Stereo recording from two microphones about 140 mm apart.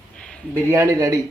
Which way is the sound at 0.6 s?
20° right (ahead or behind).